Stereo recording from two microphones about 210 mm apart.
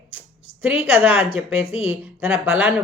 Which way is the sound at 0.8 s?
5° right (ahead or behind).